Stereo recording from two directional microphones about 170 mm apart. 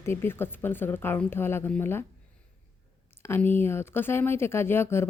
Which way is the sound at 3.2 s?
15° left (ahead or behind).